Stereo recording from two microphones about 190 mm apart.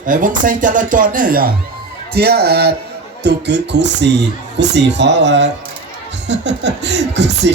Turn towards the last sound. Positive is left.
turn(degrees=-65)  # may be behind; listen again after turning